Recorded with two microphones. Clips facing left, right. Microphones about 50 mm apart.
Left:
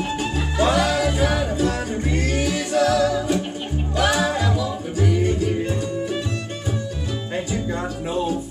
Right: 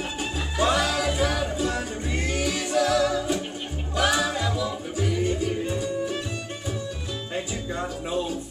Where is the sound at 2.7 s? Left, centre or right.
Centre.